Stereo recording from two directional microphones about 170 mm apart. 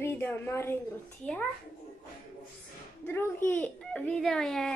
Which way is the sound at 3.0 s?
10° left (ahead or behind).